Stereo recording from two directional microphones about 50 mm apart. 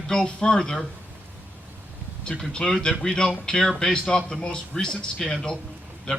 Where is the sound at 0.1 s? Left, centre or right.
Centre.